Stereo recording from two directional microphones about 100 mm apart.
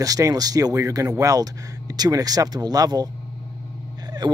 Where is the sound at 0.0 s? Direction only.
35° right (ahead or behind).